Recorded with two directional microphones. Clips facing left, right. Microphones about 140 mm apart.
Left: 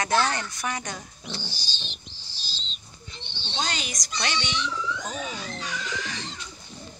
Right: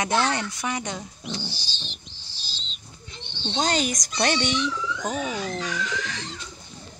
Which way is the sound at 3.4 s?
45° right (ahead or behind).